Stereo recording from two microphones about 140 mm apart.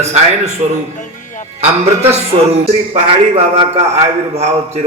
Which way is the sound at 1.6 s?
50° right (ahead or behind).